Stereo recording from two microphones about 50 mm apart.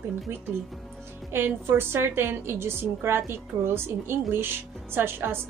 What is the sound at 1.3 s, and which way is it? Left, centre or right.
A woman's voice, right.